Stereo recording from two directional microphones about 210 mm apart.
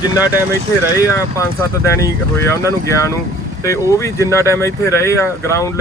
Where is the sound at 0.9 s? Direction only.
15° left (ahead or behind).